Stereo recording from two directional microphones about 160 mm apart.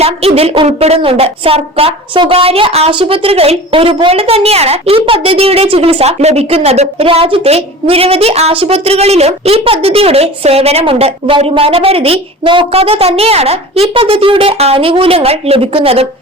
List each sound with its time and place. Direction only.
0.0 s a woman's voice: 40° right (ahead or behind)